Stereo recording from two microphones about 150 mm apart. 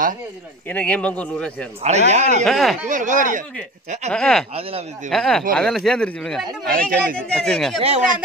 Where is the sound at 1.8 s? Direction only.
50° right (ahead or behind).